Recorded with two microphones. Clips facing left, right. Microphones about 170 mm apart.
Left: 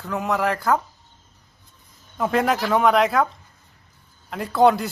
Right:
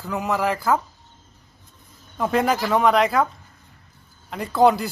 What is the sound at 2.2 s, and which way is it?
A child's voice, centre (ahead or behind).